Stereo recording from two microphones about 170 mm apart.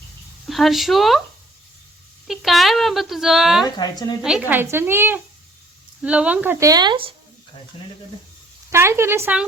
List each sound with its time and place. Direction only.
0.4 s speech: centre (ahead or behind)
2.2 s speech: centre (ahead or behind)
3.8 s a woman's voice: 25° left (ahead or behind)
4.2 s speech: 5° right (ahead or behind); by 7.1 s 30° right (ahead or behind)
8.7 s speech: 15° right (ahead or behind)